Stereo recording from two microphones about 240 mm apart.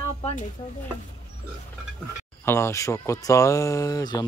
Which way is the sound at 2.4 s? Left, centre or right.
Centre.